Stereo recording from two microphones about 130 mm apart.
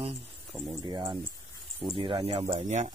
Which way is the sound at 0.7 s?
30° right (ahead or behind).